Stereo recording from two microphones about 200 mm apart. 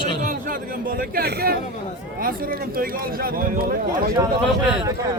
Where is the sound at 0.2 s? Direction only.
40° right (ahead or behind).